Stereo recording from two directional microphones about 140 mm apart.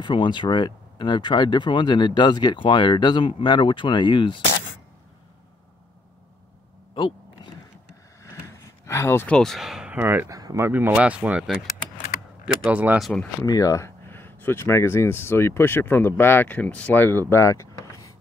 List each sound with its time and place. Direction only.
0.0 s speech: 35° left (ahead or behind)
8.2 s vehicle: 20° left (ahead or behind)
9.4 s speech: centre (ahead or behind)
12.6 s speech: 10° right (ahead or behind)
13.0 s speech: 5° left (ahead or behind)
13.4 s speech: 25° left (ahead or behind)